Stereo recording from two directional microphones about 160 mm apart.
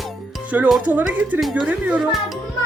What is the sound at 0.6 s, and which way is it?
Speech, 5° right (ahead or behind).